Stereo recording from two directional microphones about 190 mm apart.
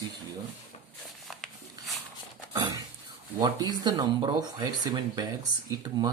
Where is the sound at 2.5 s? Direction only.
20° right (ahead or behind).